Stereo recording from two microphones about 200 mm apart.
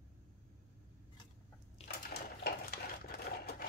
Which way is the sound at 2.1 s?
50° left (ahead or behind).